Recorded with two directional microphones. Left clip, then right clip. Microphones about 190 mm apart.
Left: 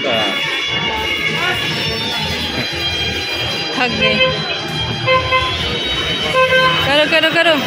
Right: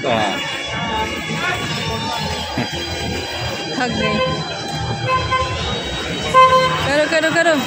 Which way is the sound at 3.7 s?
5° right (ahead or behind).